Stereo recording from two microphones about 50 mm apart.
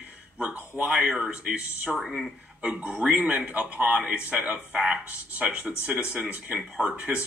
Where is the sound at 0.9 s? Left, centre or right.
Centre.